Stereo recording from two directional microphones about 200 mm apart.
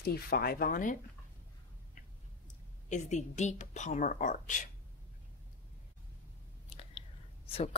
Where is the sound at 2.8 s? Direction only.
35° left (ahead or behind).